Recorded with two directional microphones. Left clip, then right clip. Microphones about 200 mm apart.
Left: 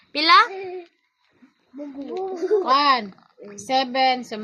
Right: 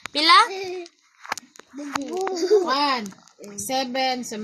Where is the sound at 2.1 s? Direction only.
40° right (ahead or behind).